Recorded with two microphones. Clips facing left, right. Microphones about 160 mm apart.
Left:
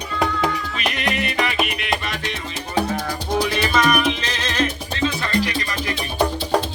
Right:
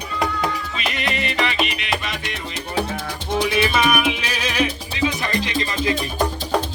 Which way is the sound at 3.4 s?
5° right (ahead or behind).